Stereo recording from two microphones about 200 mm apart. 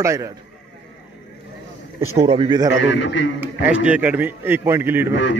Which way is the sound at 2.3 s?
25° right (ahead or behind).